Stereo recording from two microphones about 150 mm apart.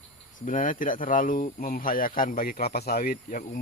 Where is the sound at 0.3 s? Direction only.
65° left (ahead or behind).